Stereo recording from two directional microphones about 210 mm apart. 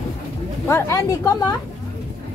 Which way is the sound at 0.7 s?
15° left (ahead or behind).